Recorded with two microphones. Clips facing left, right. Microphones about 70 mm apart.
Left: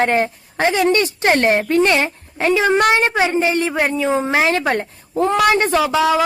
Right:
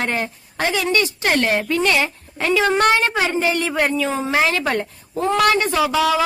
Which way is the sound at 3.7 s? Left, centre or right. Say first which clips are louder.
Left 1 dB; centre.